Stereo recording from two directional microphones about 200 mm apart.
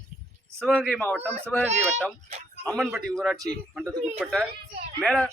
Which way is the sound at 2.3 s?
35° right (ahead or behind).